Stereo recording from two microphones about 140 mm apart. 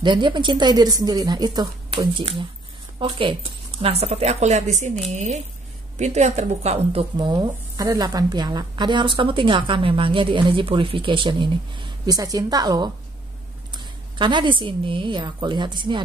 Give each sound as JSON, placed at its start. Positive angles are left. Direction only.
{"t": 0.0, "sound": "speech", "side_deg": -35}
{"t": 7.3, "sound": "speech", "side_deg": -30}